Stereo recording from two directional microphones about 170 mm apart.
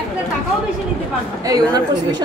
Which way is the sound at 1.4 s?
25° right (ahead or behind).